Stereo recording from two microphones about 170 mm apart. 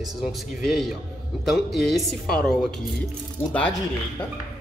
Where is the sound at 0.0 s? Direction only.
Centre (ahead or behind).